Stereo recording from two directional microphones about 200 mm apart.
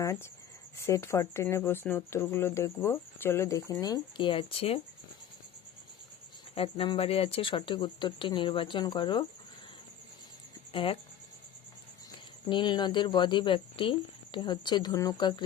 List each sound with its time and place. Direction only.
0.0 s speech: 15° left (ahead or behind)
6.5 s speech: 30° left (ahead or behind)
10.7 s speech: 25° left (ahead or behind)
12.5 s speech: 25° left (ahead or behind)